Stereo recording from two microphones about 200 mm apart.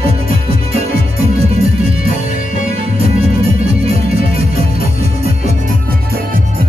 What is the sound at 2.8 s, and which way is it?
Music, 30° right (ahead or behind).